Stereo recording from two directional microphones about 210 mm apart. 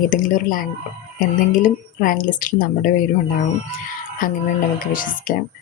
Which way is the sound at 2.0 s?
40° left (ahead or behind).